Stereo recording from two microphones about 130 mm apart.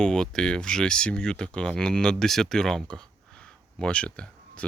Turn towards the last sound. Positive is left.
turn(degrees=10)  # may be behind; listen again after turning